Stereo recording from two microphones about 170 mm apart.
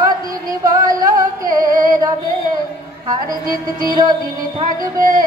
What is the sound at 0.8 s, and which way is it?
Music, 20° right (ahead or behind).